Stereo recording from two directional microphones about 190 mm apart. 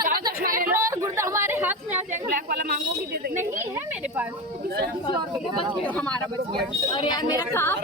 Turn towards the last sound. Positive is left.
turn(degrees=10)  # may be behind; listen again after turning